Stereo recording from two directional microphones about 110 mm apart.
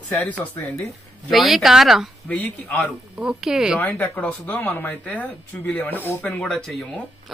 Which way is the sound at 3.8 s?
15° left (ahead or behind).